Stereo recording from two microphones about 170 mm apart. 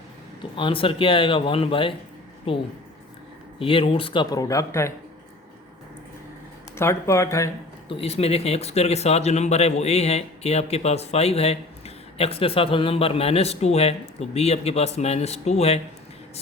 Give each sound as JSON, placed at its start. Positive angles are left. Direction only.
{"t": 0.5, "sound": "speech", "side_deg": 30}
{"t": 6.7, "sound": "speech", "side_deg": 15}
{"t": 7.9, "sound": "speech", "side_deg": 35}